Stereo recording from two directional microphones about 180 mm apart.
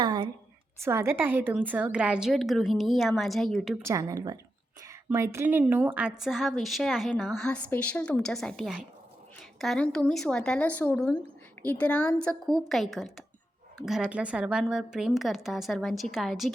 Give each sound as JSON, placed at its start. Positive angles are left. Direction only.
{"t": 0.0, "sound": "a sound", "side_deg": -25}
{"t": 0.8, "sound": "a woman's voice", "side_deg": -15}
{"t": 3.8, "sound": "a woman's voice", "side_deg": -20}